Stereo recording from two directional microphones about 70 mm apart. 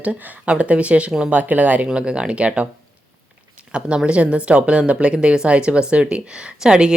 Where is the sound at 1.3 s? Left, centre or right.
Right.